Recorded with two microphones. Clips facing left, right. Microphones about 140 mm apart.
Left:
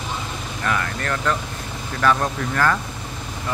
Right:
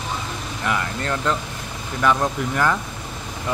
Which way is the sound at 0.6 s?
20° right (ahead or behind).